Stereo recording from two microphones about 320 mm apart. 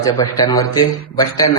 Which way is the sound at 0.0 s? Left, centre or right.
Centre.